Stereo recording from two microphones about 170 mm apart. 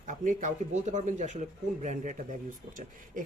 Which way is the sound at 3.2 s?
50° right (ahead or behind).